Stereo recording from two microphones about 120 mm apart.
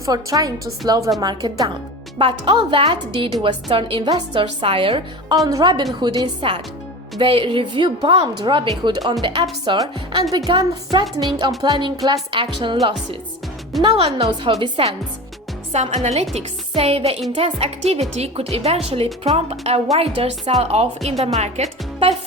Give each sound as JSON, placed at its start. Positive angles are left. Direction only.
{"t": 0.0, "sound": "a woman's voice", "side_deg": -30}
{"t": 5.5, "sound": "a woman's voice", "side_deg": -35}
{"t": 13.9, "sound": "a woman's voice", "side_deg": -55}
{"t": 15.7, "sound": "a woman's voice", "side_deg": -70}
{"t": 16.3, "sound": "a woman's voice", "side_deg": -60}
{"t": 20.5, "sound": "a woman's voice", "side_deg": -65}